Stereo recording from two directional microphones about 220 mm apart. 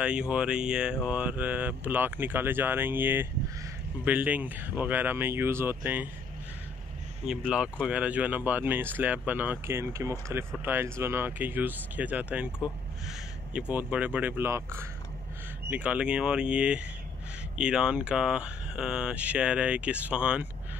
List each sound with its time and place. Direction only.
0.0 s speech: 5° right (ahead or behind)
7.2 s speech: 5° right (ahead or behind)